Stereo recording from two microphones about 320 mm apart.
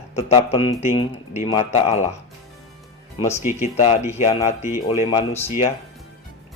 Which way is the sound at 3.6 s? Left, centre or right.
Centre.